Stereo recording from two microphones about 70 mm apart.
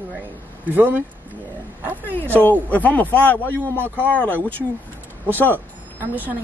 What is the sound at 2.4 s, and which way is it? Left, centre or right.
Speech, left.